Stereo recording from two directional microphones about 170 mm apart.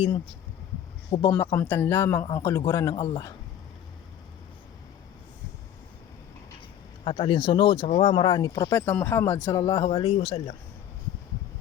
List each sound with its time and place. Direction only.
1.3 s a man's voice: 20° left (ahead or behind)
2.9 s speech: 35° left (ahead or behind)
7.0 s speech: 35° left (ahead or behind)